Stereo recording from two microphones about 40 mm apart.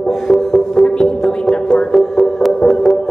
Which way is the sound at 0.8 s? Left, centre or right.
Centre.